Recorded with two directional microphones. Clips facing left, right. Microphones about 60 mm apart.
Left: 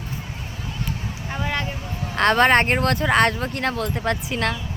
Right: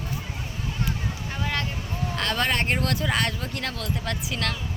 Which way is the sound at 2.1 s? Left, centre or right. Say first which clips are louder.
Left 10 dB; left.